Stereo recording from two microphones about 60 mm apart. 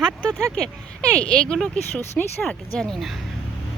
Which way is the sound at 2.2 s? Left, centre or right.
Centre.